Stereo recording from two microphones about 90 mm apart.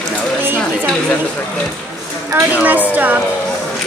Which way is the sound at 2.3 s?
20° right (ahead or behind).